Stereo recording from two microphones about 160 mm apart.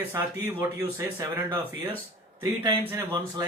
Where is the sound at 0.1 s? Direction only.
15° right (ahead or behind).